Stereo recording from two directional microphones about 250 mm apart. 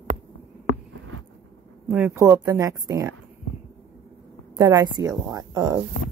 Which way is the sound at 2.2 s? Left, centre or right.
Centre.